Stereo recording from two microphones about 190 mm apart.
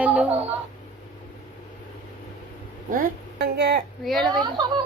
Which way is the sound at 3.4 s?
60° right (ahead or behind).